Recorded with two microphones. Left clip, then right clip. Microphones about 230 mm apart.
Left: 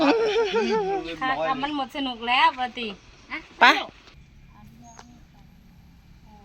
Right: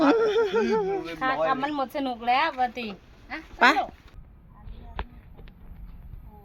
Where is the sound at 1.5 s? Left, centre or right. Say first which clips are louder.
Even; right.